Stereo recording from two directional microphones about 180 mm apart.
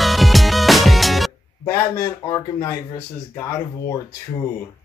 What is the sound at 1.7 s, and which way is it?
A man's voice, 15° left (ahead or behind).